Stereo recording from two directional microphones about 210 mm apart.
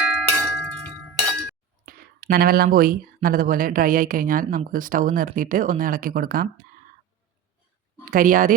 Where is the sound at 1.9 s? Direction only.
45° right (ahead or behind).